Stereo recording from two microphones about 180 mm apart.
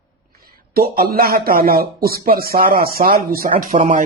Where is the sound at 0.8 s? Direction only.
60° right (ahead or behind).